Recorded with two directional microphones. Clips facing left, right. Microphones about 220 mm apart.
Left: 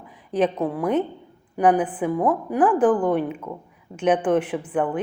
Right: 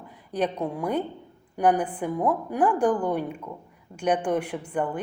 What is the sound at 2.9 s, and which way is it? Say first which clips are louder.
Speech: left 5 dB; 55° left (ahead or behind).